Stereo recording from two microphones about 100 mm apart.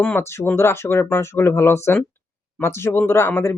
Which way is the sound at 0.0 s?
25° left (ahead or behind).